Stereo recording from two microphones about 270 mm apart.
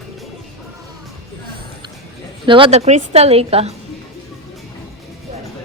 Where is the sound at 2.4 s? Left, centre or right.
Centre.